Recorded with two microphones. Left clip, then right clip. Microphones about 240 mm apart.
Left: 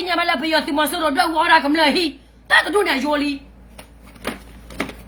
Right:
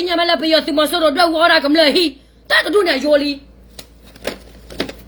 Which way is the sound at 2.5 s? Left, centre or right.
Centre.